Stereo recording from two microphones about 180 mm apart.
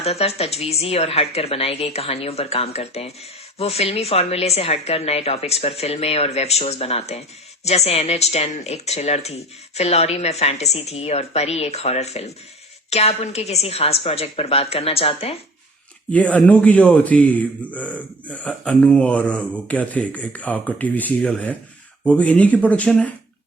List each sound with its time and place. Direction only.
0.0 s speech: 35° left (ahead or behind)
16.1 s a man's voice: 10° left (ahead or behind)